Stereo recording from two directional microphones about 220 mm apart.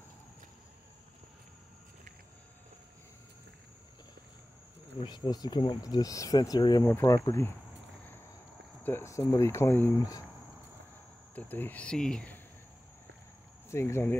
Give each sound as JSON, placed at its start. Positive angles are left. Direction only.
{"t": 5.0, "sound": "speech", "side_deg": 20}
{"t": 8.8, "sound": "speech", "side_deg": 10}
{"t": 11.3, "sound": "speech", "side_deg": 10}
{"t": 13.7, "sound": "speech", "side_deg": 10}